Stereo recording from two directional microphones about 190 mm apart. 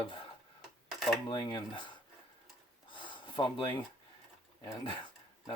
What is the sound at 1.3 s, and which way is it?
Speech, 20° left (ahead or behind).